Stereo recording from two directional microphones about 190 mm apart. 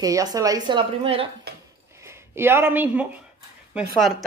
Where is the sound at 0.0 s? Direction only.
20° right (ahead or behind).